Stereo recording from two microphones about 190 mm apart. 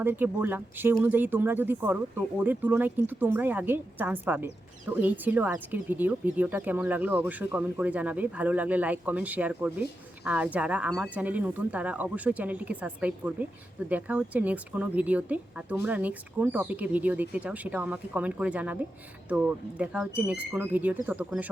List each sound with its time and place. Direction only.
0.0 s speech: 10° right (ahead or behind)